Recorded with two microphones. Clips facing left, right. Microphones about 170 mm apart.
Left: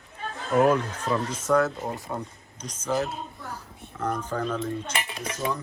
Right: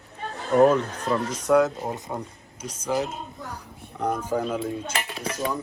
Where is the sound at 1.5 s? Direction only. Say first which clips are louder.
Right 3 dB; 15° right (ahead or behind).